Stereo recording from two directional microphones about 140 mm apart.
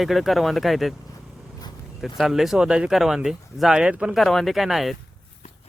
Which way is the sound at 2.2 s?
Centre (ahead or behind).